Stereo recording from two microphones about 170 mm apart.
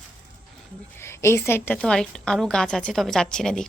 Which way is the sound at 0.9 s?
15° left (ahead or behind).